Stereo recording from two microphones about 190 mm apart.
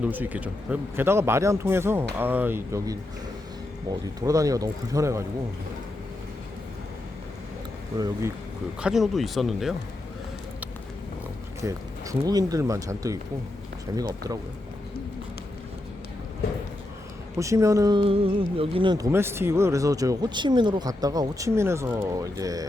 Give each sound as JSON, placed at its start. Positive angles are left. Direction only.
{"t": 0.0, "sound": "speech", "side_deg": -10}
{"t": 4.2, "sound": "speech", "side_deg": -15}
{"t": 7.9, "sound": "speech", "side_deg": -20}
{"t": 8.8, "sound": "speech", "side_deg": 0}
{"t": 11.6, "sound": "speech", "side_deg": -20}
{"t": 17.3, "sound": "speech", "side_deg": -15}
{"t": 19.1, "sound": "speech", "side_deg": -15}